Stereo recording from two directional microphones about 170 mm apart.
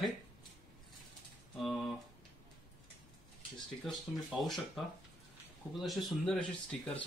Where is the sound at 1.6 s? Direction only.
Centre (ahead or behind).